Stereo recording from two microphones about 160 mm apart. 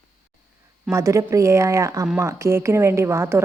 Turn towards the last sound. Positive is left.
turn(degrees=-15)  # may be behind; listen again after turning